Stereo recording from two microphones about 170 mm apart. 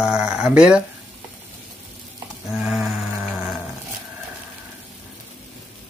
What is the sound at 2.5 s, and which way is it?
Sheep, 5° right (ahead or behind).